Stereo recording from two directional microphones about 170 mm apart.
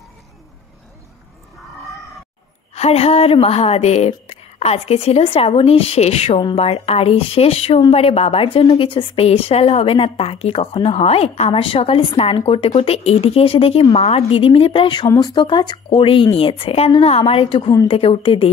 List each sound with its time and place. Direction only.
2.7 s a woman's voice: 35° left (ahead or behind)